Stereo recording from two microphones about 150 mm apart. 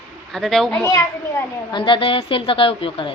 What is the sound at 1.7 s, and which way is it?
A woman's voice, 30° left (ahead or behind).